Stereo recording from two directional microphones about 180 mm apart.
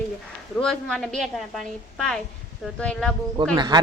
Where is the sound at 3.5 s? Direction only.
25° right (ahead or behind).